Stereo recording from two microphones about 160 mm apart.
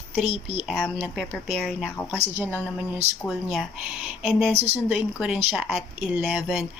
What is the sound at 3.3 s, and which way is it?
Speech, centre (ahead or behind).